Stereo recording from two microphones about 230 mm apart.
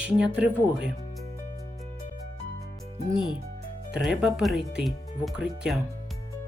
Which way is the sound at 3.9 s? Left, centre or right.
Centre.